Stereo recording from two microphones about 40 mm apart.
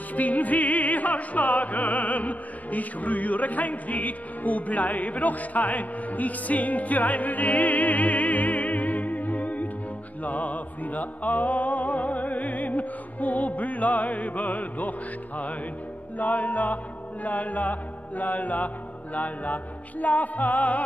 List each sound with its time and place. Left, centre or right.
0.1 s music: left